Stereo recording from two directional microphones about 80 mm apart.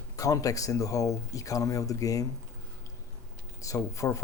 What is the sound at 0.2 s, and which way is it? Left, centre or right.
Speech, left.